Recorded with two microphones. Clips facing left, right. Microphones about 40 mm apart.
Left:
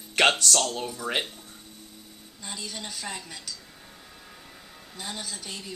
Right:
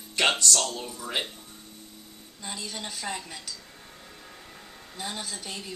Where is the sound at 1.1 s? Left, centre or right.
Left.